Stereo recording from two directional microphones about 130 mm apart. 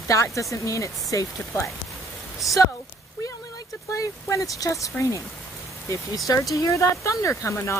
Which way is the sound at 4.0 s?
25° left (ahead or behind).